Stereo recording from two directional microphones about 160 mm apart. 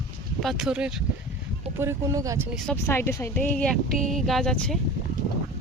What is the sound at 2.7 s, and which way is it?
Speech, 15° left (ahead or behind).